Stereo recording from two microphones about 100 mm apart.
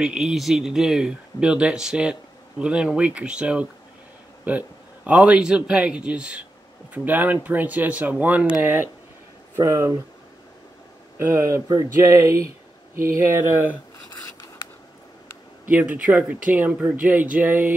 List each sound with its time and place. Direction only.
0.0 s speech: 5° right (ahead or behind)
9.6 s speech: 30° right (ahead or behind)
11.1 s speech: 25° right (ahead or behind)
15.7 s speech: 15° right (ahead or behind)